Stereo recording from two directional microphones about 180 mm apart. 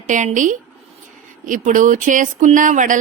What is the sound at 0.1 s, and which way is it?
A woman's voice, 45° right (ahead or behind).